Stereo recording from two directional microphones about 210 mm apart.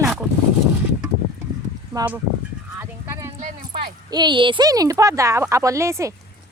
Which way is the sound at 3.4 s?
35° right (ahead or behind).